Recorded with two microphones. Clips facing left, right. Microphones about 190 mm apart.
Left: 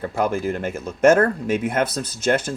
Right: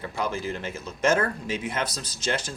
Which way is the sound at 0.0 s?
50° left (ahead or behind).